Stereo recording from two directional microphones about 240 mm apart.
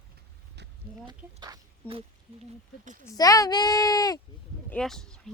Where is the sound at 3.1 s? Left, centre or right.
Centre.